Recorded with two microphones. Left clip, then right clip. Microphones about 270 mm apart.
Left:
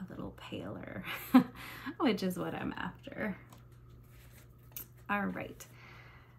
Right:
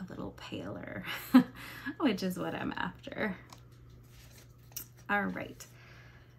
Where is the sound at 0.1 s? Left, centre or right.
Centre.